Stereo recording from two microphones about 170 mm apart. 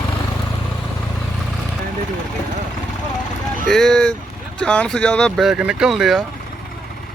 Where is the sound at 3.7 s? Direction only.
5° left (ahead or behind).